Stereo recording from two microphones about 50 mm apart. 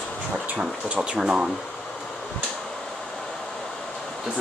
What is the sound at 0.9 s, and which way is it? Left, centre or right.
Speech, centre.